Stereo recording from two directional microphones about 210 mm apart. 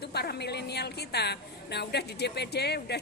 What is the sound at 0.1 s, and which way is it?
A woman's voice, 50° left (ahead or behind).